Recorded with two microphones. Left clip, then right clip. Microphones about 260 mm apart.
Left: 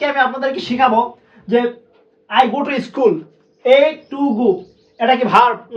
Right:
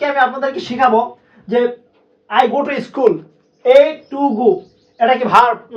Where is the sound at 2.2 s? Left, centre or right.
Centre.